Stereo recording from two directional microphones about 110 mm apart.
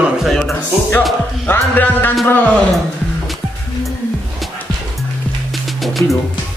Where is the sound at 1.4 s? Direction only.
20° left (ahead or behind).